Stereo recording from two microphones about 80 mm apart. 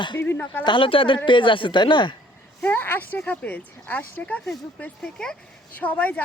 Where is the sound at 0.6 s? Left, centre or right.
Left.